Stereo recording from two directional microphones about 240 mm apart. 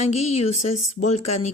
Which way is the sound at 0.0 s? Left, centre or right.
Left.